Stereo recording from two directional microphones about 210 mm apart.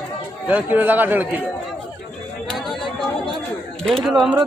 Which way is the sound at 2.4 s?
Centre (ahead or behind).